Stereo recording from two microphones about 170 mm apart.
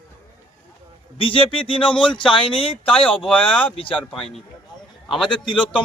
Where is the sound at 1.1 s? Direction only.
30° left (ahead or behind).